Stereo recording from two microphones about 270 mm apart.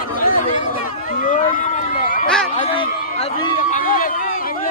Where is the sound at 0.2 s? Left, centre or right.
Left.